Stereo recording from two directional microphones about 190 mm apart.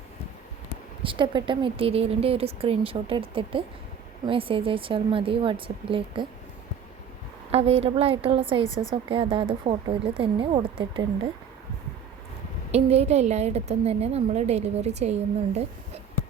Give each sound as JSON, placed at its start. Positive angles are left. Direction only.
{"t": 1.0, "sound": "a woman's voice", "side_deg": -25}
{"t": 7.5, "sound": "a woman's voice", "side_deg": -30}
{"t": 12.7, "sound": "a woman's voice", "side_deg": -35}